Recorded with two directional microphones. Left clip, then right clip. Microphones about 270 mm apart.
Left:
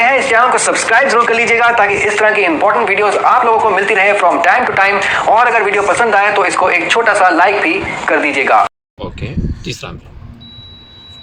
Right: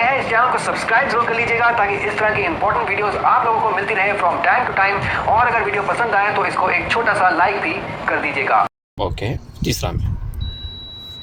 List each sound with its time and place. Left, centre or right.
0.0 s speech: left
9.0 s speech: right